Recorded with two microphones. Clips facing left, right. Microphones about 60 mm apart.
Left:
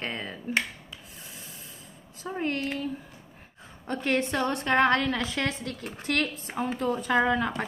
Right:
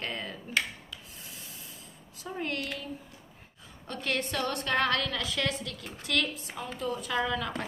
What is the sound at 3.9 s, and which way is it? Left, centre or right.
A woman's voice, left.